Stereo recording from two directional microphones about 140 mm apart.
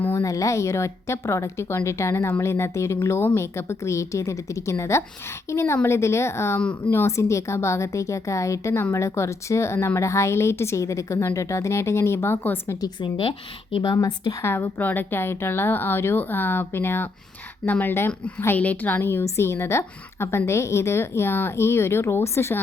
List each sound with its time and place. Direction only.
0.0 s a woman's voice: 20° left (ahead or behind)
6.6 s a woman's voice: 10° left (ahead or behind)
12.8 s a woman's voice: 35° left (ahead or behind)
14.4 s a woman's voice: 15° left (ahead or behind)